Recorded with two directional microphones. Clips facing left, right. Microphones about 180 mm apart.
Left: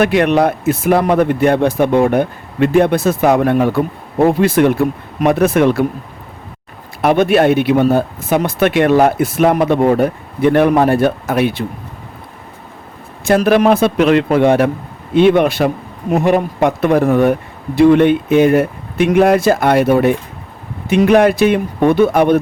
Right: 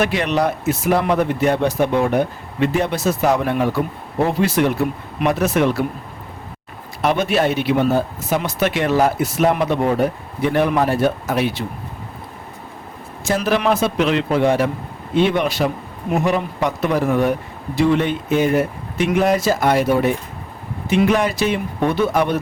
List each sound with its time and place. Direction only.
0.0 s speech: 55° left (ahead or behind)
7.0 s speech: 55° left (ahead or behind)
13.2 s speech: 60° left (ahead or behind)